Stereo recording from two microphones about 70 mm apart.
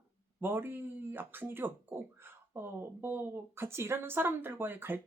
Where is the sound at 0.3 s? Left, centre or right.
Right.